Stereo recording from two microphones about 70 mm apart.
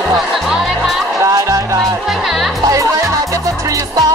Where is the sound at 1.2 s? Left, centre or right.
Right.